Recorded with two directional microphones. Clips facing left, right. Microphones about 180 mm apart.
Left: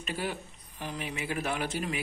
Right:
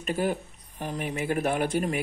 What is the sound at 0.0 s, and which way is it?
Speech, 45° right (ahead or behind).